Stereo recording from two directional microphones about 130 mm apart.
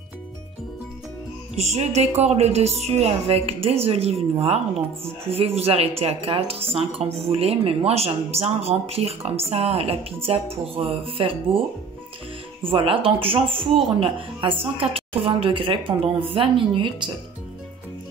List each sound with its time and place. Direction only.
1.6 s a woman's voice: 60° right (ahead or behind)
12.6 s a woman's voice: 45° right (ahead or behind)